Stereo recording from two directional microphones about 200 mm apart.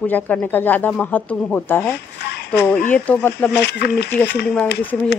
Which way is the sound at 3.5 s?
55° left (ahead or behind).